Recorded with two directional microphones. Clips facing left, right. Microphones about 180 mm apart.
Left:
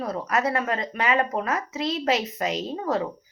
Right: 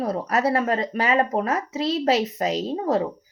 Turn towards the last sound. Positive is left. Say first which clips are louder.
# right 4 dB
turn(degrees=-35)  # may be behind; listen again after turning